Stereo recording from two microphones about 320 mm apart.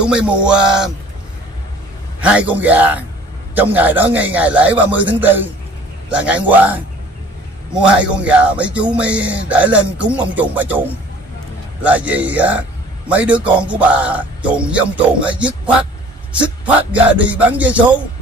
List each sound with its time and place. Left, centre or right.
0.0 s speech: centre
2.1 s a man's voice: centre